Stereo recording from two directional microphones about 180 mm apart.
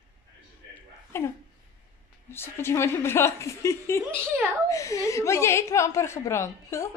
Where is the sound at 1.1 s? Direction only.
15° left (ahead or behind).